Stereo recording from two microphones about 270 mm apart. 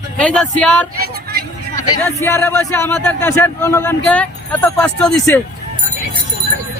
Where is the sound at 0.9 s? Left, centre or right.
Right.